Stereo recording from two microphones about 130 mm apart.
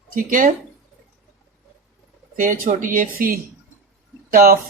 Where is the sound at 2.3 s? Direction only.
90° right.